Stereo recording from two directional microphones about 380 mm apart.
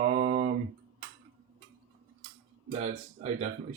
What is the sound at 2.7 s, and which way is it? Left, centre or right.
Speech, centre.